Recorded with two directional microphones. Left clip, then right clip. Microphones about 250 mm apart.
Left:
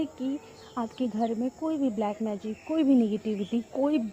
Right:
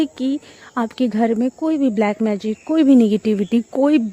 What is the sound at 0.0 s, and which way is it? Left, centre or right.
Speech, right.